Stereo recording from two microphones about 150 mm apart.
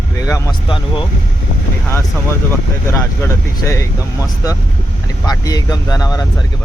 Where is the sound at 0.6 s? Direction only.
35° left (ahead or behind).